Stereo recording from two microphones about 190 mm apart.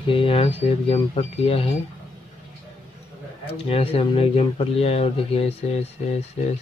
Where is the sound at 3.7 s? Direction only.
30° left (ahead or behind).